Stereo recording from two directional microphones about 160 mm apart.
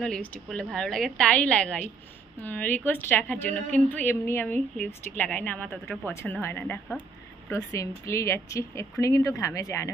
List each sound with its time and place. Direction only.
0.0 s a woman's voice: 5° left (ahead or behind)
7.4 s speech: 20° left (ahead or behind)